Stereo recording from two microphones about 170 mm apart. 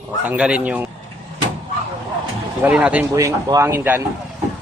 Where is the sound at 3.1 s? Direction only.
20° right (ahead or behind).